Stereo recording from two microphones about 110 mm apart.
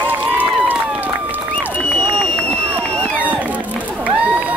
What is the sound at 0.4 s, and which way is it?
Run, 15° right (ahead or behind).